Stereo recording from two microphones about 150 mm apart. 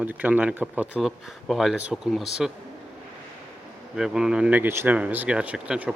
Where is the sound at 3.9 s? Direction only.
5° right (ahead or behind).